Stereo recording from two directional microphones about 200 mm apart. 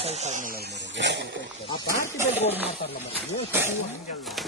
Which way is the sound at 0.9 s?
60° right (ahead or behind).